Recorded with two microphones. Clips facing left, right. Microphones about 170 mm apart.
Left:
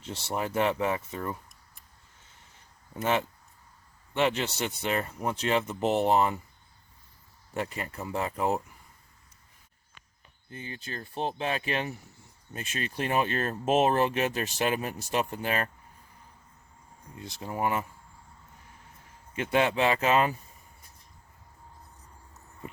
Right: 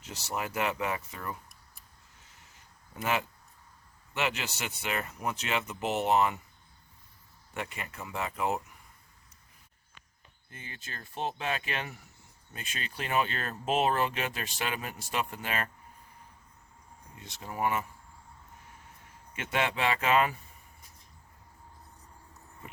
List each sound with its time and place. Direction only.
0.0 s speech: 30° left (ahead or behind)
2.9 s speech: 30° left (ahead or behind)
7.5 s speech: 35° left (ahead or behind)
10.5 s speech: 30° left (ahead or behind)
12.6 s speech: 30° right (ahead or behind)
13.1 s speech: 35° left (ahead or behind)
13.9 s speech: 30° left (ahead or behind)
17.2 s speech: 25° left (ahead or behind)
19.4 s speech: 30° left (ahead or behind)